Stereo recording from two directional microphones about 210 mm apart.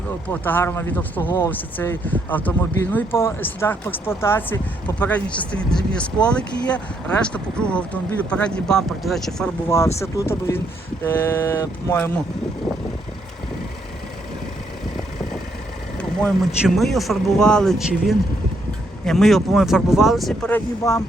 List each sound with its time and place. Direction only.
0.3 s speech: 10° left (ahead or behind)
16.0 s speech: 5° left (ahead or behind)
20.8 s speech: 15° left (ahead or behind)